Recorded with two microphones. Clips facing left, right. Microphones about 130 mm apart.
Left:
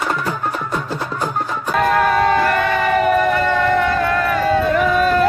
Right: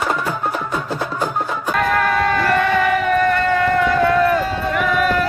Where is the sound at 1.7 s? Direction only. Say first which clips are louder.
Left 3 dB; 10° left (ahead or behind).